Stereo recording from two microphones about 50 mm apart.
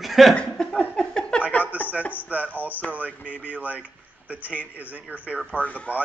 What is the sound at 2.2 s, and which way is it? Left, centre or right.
Speech, right.